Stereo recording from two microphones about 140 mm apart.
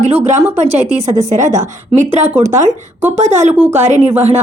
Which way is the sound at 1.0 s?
25° right (ahead or behind).